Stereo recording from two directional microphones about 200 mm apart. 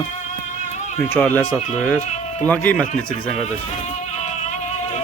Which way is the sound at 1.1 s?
10° left (ahead or behind).